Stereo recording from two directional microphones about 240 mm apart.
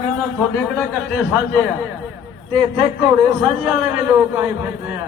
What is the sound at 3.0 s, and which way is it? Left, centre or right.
A man's voice, centre.